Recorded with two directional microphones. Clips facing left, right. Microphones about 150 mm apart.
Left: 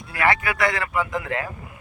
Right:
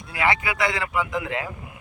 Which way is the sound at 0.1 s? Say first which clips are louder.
Left 2 dB; 15° right (ahead or behind).